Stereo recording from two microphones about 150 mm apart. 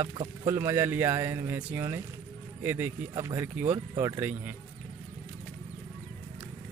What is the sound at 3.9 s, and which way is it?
Speech, 25° right (ahead or behind).